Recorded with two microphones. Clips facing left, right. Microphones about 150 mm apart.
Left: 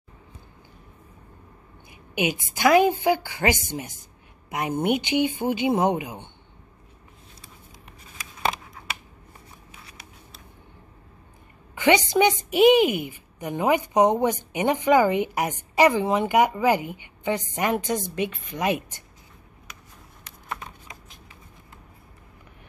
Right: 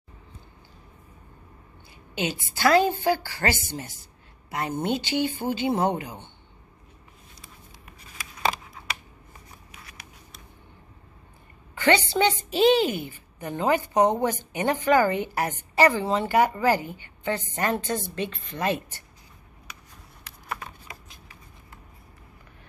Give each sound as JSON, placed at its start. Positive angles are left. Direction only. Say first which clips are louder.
{"t": 1.9, "sound": "a woman's voice", "louder": "left 4 dB", "side_deg": 15}
{"t": 9.7, "sound": "a sound", "louder": "left 1 dB", "side_deg": 30}
{"t": 11.7, "sound": "a woman's voice", "louder": "left 2 dB", "side_deg": 15}